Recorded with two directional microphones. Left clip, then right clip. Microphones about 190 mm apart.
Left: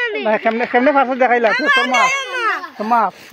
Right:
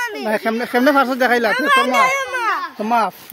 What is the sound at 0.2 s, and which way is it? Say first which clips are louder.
Speech: left 4 dB; 30° right (ahead or behind).